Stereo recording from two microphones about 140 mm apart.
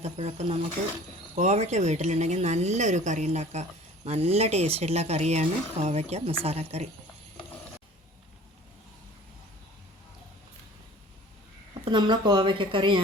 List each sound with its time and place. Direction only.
0.0 s speech: 50° right (ahead or behind)
11.9 s speech: 30° right (ahead or behind)